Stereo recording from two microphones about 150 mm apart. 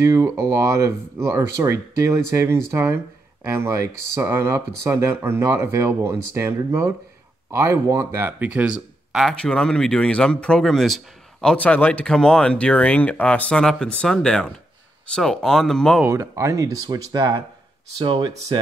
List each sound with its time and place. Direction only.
0.0 s speech: 20° right (ahead or behind); by 16.0 s 5° left (ahead or behind)
16.0 s speech: 20° right (ahead or behind)